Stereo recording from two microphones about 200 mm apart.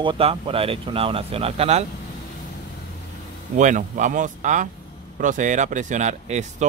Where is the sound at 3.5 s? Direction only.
40° right (ahead or behind).